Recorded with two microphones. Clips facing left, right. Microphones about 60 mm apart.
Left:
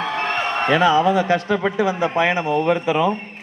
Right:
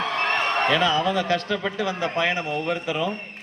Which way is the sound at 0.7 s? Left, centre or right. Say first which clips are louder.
Left 9 dB; left.